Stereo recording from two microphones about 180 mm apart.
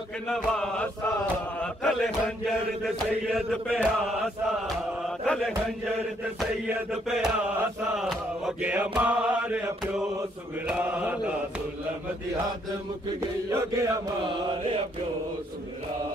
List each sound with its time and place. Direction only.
0.3 s chant: 5° left (ahead or behind)
6.7 s chant: 5° right (ahead or behind)
13.5 s chant: 15° right (ahead or behind)